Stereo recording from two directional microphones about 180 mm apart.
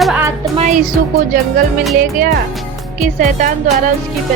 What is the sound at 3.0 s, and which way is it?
Speech, 45° right (ahead or behind).